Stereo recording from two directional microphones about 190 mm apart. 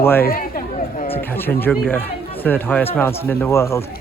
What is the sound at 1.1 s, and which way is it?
Speech, 10° left (ahead or behind).